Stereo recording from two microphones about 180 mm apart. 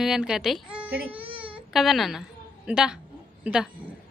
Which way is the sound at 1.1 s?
30° right (ahead or behind).